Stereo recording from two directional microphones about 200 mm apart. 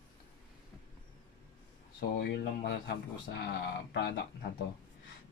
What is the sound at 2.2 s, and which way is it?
Speech, 55° left (ahead or behind).